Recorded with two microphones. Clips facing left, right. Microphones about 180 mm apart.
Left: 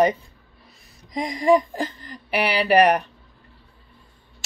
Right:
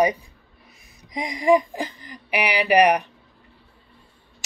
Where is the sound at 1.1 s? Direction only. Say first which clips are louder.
Even; 20° right (ahead or behind).